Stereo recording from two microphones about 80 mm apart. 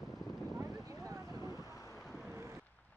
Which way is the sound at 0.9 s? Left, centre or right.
Right.